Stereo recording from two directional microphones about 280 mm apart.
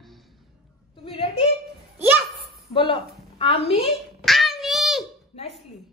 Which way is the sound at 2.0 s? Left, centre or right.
Centre.